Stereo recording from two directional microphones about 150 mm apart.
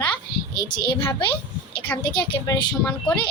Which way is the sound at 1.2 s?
35° left (ahead or behind).